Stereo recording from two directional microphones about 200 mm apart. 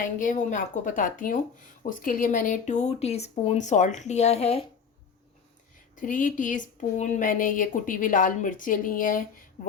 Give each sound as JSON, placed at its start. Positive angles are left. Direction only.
{"t": 0.2, "sound": "speech", "side_deg": 40}
{"t": 6.0, "sound": "speech", "side_deg": 40}